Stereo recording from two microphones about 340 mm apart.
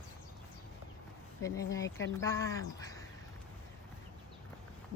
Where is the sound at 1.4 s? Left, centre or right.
Centre.